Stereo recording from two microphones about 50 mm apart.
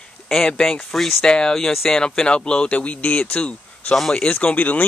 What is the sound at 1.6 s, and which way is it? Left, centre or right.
Speech, centre.